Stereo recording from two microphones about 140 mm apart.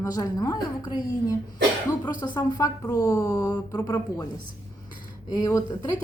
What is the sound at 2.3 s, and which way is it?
A woman's voice, 20° left (ahead or behind).